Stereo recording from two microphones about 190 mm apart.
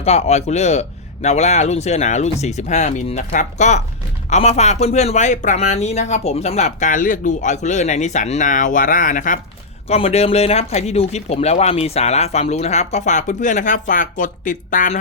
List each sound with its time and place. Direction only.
0.0 s speech: 35° left (ahead or behind)